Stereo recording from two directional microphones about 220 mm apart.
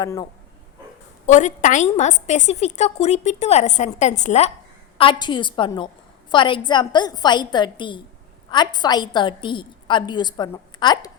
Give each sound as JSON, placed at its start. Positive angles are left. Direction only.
{"t": 0.0, "sound": "speech", "side_deg": 15}
{"t": 1.3, "sound": "a woman's voice", "side_deg": 35}